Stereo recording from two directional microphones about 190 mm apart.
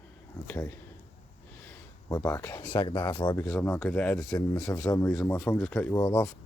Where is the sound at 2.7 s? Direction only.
25° left (ahead or behind).